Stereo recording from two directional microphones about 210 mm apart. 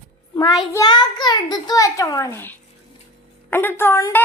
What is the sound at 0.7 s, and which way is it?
A child's voice, 20° left (ahead or behind).